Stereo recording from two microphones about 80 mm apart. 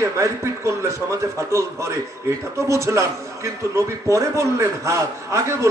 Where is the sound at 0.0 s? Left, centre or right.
Right.